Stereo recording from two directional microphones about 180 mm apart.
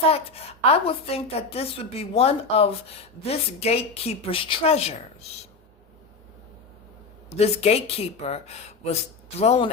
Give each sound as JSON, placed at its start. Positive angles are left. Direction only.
{"t": 0.1, "sound": "a woman's voice", "side_deg": 35}
{"t": 7.3, "sound": "a woman's voice", "side_deg": 35}